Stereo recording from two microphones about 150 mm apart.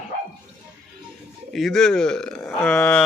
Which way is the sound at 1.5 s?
Centre (ahead or behind).